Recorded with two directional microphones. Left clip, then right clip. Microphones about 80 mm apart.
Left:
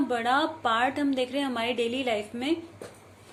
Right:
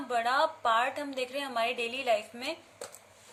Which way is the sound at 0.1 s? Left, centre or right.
Right.